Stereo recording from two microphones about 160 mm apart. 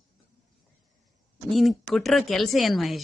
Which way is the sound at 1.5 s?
Centre (ahead or behind).